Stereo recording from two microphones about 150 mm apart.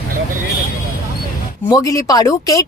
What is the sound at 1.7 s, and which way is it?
Speech, 25° left (ahead or behind).